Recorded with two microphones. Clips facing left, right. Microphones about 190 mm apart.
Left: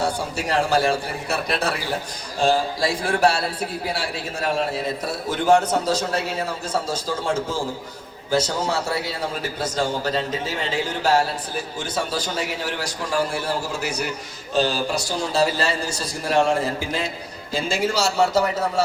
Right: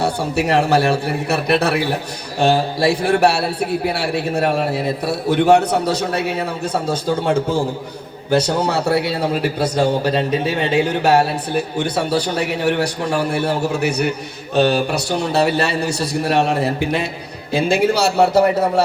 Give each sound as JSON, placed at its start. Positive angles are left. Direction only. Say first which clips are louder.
{"t": 0.0, "sound": "a man's voice", "louder": "right 6 dB", "side_deg": -65}